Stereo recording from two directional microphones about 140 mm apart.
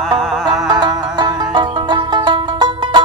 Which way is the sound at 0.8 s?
30° right (ahead or behind).